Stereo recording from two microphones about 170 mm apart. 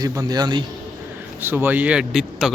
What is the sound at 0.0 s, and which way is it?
Speech, 20° right (ahead or behind).